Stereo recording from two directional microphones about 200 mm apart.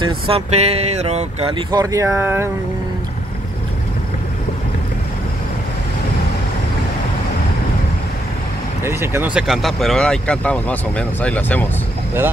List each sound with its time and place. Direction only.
0.0 s speech: 30° right (ahead or behind); by 2.5 s 10° right (ahead or behind)
8.8 s speech: 10° right (ahead or behind); by 11.6 s 10° left (ahead or behind)